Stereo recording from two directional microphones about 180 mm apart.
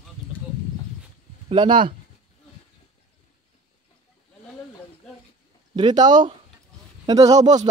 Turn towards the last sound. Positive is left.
turn(degrees=-20)  # may be behind; listen again after turning